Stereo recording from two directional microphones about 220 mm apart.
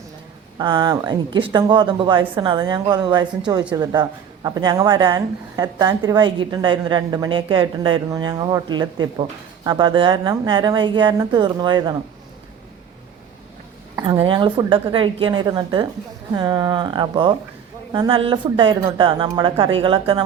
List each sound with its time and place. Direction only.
0.6 s a woman's voice: 20° right (ahead or behind)
14.0 s a woman's voice: 20° right (ahead or behind)